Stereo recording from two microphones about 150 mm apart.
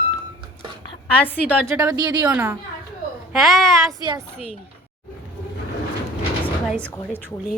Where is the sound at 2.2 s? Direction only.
15° right (ahead or behind).